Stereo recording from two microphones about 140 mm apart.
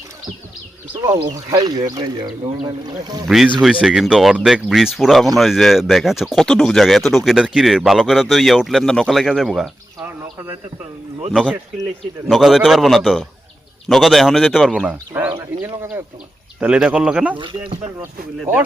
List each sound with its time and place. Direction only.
1.0 s speech: 20° right (ahead or behind)
3.2 s speech: 5° right (ahead or behind)
11.3 s speech: 5° right (ahead or behind)
14.8 s speech: 10° right (ahead or behind)
17.3 s speech: 40° right (ahead or behind)